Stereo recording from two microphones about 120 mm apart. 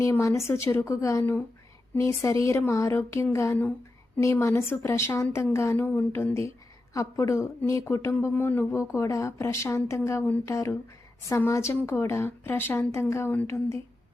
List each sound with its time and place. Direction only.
0.0 s speech: 25° left (ahead or behind)